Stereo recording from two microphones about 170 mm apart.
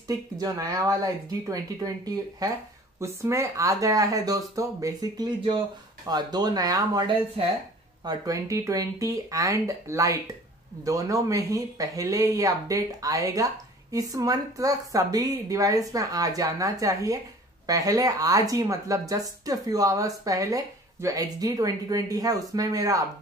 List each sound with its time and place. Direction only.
0.1 s speech: 20° right (ahead or behind)